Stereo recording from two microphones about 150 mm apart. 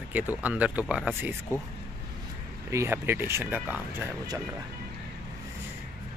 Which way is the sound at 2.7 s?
15° right (ahead or behind).